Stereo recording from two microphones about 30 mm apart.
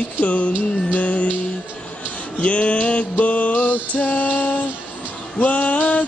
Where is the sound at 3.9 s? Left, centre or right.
Left.